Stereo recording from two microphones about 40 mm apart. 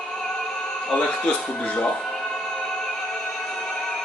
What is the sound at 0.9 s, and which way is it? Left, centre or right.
Speech, left.